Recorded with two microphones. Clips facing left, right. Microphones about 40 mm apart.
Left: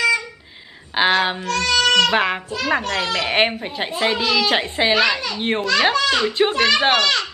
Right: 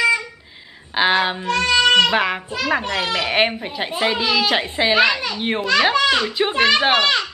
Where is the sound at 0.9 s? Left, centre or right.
Centre.